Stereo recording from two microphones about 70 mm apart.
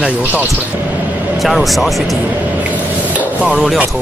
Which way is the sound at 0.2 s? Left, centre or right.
Right.